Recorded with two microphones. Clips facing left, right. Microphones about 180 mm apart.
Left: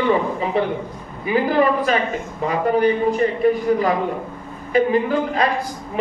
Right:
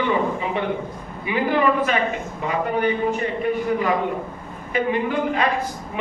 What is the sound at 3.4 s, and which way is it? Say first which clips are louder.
Speech: left 6 dB; 35° left (ahead or behind).